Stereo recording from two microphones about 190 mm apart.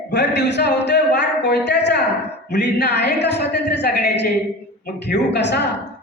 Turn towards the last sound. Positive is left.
turn(degrees=65)  # may be behind; listen again after turning